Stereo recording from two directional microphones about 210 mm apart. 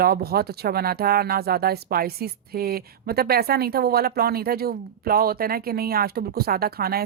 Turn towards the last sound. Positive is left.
turn(degrees=-45)  # may be behind; listen again after turning